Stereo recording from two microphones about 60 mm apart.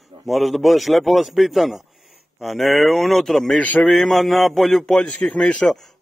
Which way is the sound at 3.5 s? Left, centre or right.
Left.